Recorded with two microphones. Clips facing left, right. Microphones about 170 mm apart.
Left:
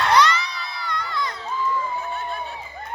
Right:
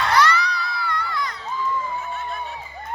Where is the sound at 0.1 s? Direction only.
20° left (ahead or behind).